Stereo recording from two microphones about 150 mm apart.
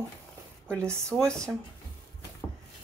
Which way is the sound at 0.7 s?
5° left (ahead or behind).